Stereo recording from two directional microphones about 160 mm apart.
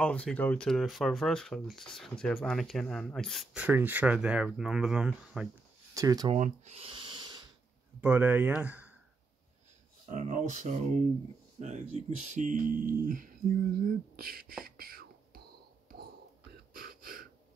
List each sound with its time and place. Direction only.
0.0 s speech: 5° left (ahead or behind)
3.5 s speech: 10° right (ahead or behind)
5.9 s speech: 25° right (ahead or behind)
6.3 s a sound: 45° right (ahead or behind); by 7.4 s 25° right (ahead or behind)
8.0 s speech: 10° right (ahead or behind)
10.0 s speech: 50° right (ahead or behind); by 14.5 s 65° right (ahead or behind)
14.6 s whispering: 65° right (ahead or behind)
16.7 s gasp: 65° right (ahead or behind)